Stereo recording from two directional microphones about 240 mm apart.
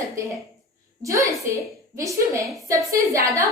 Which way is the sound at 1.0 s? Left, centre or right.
Centre.